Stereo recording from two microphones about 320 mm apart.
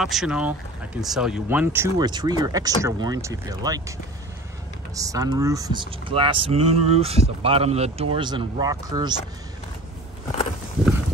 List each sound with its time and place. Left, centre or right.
0.0 s speech: centre
4.9 s speech: centre